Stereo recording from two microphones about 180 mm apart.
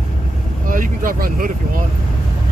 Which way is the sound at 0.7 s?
50° right (ahead or behind).